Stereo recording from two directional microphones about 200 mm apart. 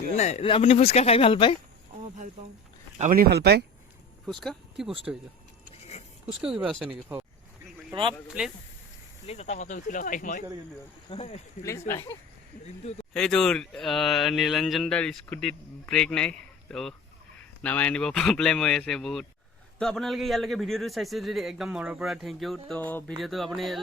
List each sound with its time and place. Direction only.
0.2 s speech: 35° left (ahead or behind)
3.0 s speech: 45° right (ahead or behind)
4.3 s speech: centre (ahead or behind)
5.1 s speech: 10° right (ahead or behind)
6.2 s speech: 5° right (ahead or behind)
8.3 s speech: 5° right (ahead or behind)
9.2 s speech: 30° left (ahead or behind)
11.9 s speech: 15° left (ahead or behind)
12.6 s speech: 30° left (ahead or behind)
13.1 s speech: 5° left (ahead or behind)